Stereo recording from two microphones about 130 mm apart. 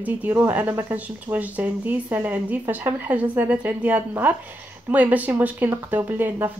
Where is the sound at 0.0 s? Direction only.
15° right (ahead or behind).